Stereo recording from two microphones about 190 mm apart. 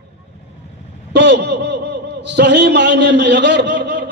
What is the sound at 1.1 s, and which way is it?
A man's voice, 65° right (ahead or behind).